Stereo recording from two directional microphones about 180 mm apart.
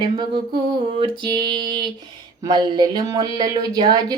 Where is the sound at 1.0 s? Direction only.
25° right (ahead or behind).